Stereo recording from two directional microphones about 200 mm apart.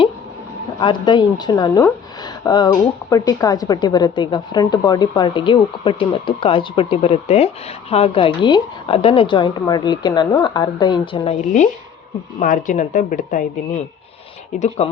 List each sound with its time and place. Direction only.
0.8 s speech: 25° left (ahead or behind)
12.4 s a woman's voice: 40° left (ahead or behind)
14.5 s a woman's voice: 35° left (ahead or behind)